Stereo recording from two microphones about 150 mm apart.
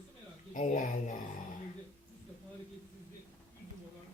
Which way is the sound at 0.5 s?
55° left (ahead or behind).